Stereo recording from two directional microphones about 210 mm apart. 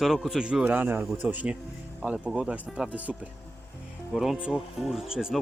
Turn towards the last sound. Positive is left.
turn(degrees=-5)  # may be behind; listen again after turning